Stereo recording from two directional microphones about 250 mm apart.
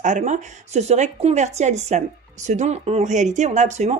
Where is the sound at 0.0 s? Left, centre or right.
Right.